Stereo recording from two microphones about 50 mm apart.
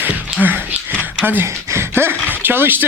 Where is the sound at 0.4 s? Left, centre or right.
Right.